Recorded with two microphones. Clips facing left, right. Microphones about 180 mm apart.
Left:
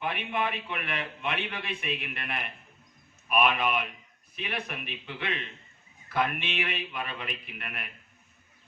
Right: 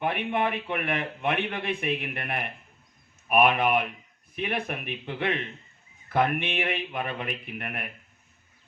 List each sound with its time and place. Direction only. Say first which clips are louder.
0.0 s a man's voice: right 4 dB; 55° right (ahead or behind)